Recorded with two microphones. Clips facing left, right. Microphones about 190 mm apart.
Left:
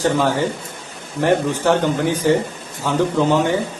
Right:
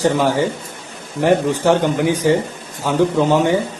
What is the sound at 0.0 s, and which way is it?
A man's voice, 15° right (ahead or behind).